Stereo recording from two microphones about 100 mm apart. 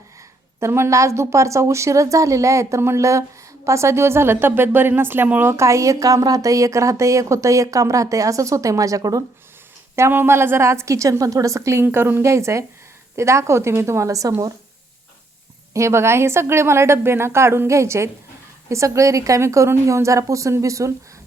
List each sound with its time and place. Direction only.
0.6 s a woman's voice: 25° right (ahead or behind)
9.9 s a woman's voice: 25° right (ahead or behind)
15.7 s a woman's voice: 30° right (ahead or behind)